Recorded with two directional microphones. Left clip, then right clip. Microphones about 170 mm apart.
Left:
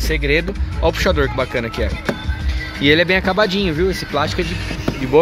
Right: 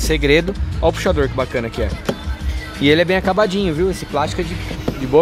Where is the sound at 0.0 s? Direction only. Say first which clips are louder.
Right 3 dB; 30° right (ahead or behind).